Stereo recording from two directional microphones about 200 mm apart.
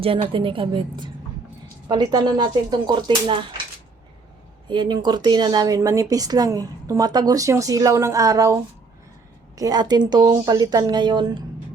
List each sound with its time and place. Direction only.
0.0 s speech: 25° right (ahead or behind)
4.7 s speech: 20° right (ahead or behind)